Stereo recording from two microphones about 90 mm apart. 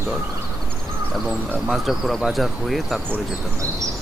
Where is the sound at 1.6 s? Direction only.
Centre (ahead or behind).